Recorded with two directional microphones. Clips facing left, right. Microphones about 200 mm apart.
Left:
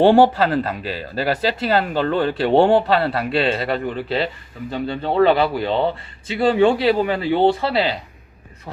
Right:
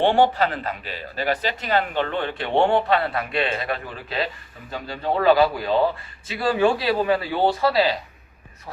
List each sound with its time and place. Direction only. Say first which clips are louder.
0.0 s speech: left 5 dB; 35° left (ahead or behind)